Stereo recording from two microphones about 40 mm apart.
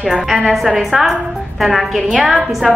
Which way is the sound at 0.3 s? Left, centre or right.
Centre.